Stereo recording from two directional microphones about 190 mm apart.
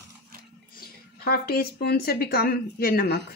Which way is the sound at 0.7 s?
55° left (ahead or behind).